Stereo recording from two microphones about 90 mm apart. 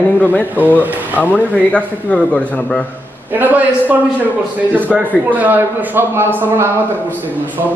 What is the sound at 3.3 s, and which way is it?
A man's voice, 20° right (ahead or behind).